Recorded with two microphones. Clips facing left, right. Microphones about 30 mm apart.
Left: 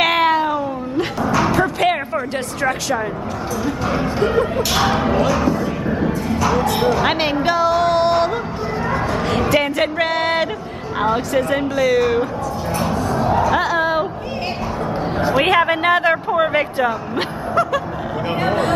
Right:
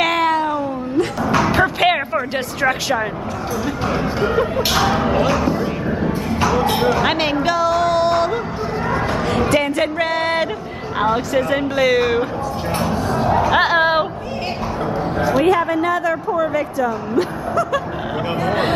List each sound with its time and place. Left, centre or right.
0.0 s cat: centre
1.5 s music: right
3.6 s speech: centre
5.1 s speech: centre
6.8 s speech: centre
7.5 s music: centre
8.9 s a sound: centre
11.0 s speech: centre
11.7 s speech: right
12.9 s bow-wow: centre
13.4 s music: right
15.3 s speech: left